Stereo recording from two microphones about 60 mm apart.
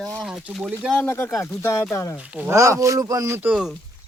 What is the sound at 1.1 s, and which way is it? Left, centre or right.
Speech, left.